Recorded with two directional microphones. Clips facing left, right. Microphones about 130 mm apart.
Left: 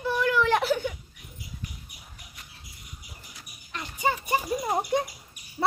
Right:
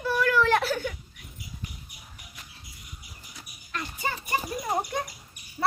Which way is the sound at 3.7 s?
15° left (ahead or behind).